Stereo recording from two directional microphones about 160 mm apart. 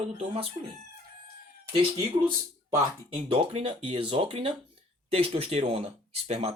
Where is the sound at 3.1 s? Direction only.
35° right (ahead or behind).